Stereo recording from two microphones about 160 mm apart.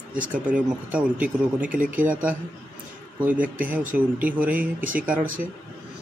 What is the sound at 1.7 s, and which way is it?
Speech, 60° right (ahead or behind).